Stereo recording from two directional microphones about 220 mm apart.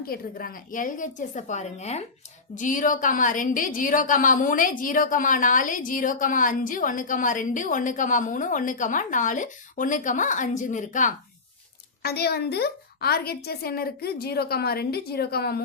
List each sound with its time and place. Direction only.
0.0 s a woman's voice: 40° left (ahead or behind)
12.0 s a woman's voice: 45° left (ahead or behind)